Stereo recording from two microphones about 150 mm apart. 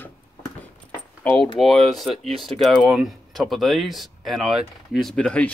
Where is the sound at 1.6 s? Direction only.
Centre (ahead or behind).